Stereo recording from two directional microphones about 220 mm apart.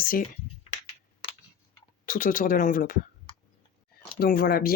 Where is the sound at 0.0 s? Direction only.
40° left (ahead or behind).